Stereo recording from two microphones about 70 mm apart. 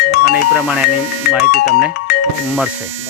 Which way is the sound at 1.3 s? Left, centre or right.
Centre.